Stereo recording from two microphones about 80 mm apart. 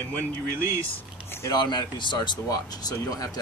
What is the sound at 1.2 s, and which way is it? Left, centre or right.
Speech, left.